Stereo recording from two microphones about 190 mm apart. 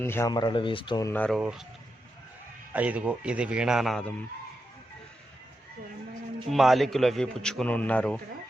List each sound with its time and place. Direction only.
0.0 s speech: 15° left (ahead or behind)
1.1 s speech: 5° left (ahead or behind)
1.4 s a man's voice: 5° right (ahead or behind)
2.7 s a man's voice: 5° right (ahead or behind)
6.5 s a man's voice: centre (ahead or behind)